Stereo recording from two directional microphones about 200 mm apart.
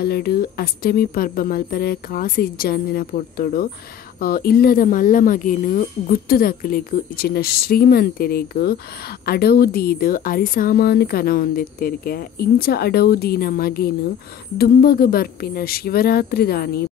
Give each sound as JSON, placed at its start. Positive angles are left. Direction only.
{"t": 0.0, "sound": "speech", "side_deg": 50}